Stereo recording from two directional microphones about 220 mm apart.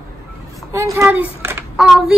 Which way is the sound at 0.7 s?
15° right (ahead or behind).